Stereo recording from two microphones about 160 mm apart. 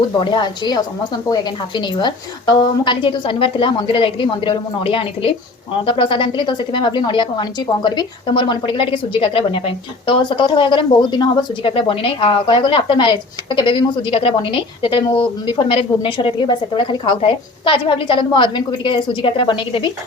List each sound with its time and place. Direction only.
0.2 s a woman's voice: 30° left (ahead or behind)